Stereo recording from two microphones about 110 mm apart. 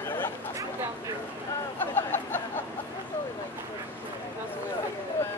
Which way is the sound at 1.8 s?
20° left (ahead or behind).